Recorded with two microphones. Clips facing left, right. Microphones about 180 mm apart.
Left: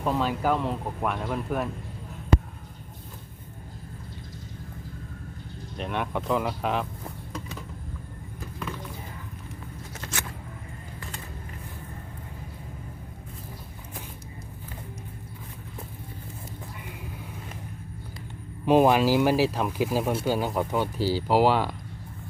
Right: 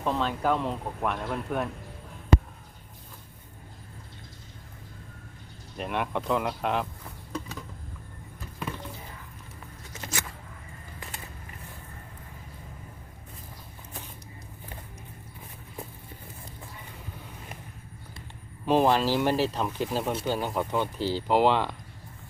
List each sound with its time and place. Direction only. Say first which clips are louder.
0.0 s speech: left 2 dB; 5° left (ahead or behind)
5.7 s speech: even; centre (ahead or behind)
18.6 s speech: left 3 dB; 10° left (ahead or behind)